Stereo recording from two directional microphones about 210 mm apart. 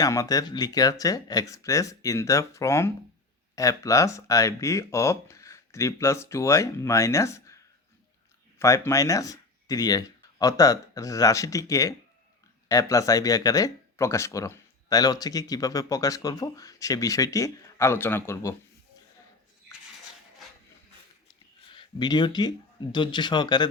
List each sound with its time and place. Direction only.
0.0 s speech: 15° left (ahead or behind)
21.7 s speech: 20° left (ahead or behind)